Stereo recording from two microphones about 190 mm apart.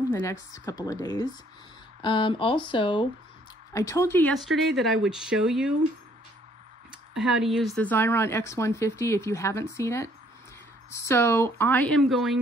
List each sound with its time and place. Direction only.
0.1 s speech: 15° left (ahead or behind)
4.3 s speech: centre (ahead or behind)
6.9 s speech: 5° right (ahead or behind)